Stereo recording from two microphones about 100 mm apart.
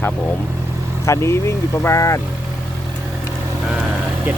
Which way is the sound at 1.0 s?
30° left (ahead or behind).